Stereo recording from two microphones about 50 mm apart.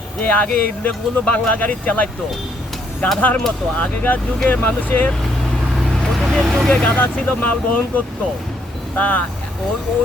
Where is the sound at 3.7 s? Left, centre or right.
Left.